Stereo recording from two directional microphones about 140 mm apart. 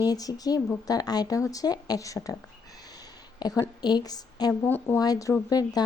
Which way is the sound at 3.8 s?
30° left (ahead or behind).